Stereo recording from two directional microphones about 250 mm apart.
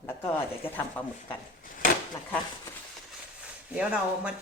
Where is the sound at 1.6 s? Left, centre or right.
Left.